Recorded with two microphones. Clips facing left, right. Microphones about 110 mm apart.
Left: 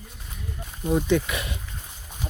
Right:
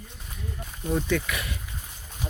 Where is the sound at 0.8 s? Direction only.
20° left (ahead or behind).